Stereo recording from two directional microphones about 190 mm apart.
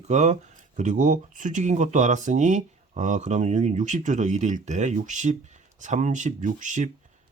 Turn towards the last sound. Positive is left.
turn(degrees=-40)  # may be behind; listen again after turning